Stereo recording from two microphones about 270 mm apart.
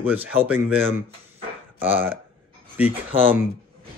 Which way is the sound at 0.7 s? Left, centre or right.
Centre.